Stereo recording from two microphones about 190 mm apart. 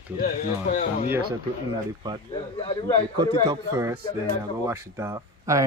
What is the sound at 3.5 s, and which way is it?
Speech, 15° right (ahead or behind).